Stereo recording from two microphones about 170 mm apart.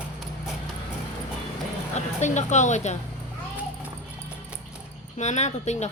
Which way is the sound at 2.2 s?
45° left (ahead or behind).